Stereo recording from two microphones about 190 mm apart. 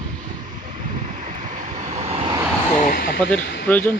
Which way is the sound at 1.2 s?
40° right (ahead or behind).